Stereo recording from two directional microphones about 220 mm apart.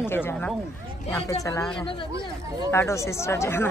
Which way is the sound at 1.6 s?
5° left (ahead or behind).